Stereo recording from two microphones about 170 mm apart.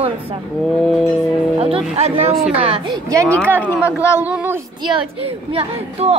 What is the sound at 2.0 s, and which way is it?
A woman's voice, 40° right (ahead or behind).